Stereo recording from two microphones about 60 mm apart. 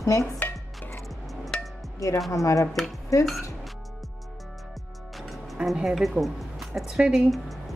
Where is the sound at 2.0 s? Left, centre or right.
Left.